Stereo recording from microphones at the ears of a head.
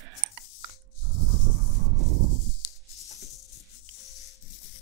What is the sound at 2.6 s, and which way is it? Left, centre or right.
Music, left.